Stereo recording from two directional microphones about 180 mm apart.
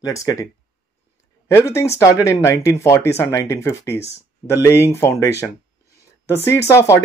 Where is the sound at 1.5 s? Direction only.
15° left (ahead or behind).